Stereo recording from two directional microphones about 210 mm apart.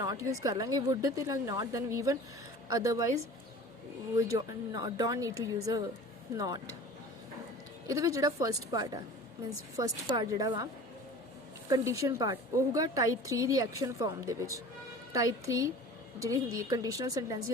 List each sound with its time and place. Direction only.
0.0 s a woman's voice: 15° right (ahead or behind)
4.4 s a woman's voice: 20° right (ahead or behind)
7.9 s a woman's voice: 15° right (ahead or behind)
10.2 s a woman's voice: 15° right (ahead or behind)
11.7 s a woman's voice: 15° right (ahead or behind)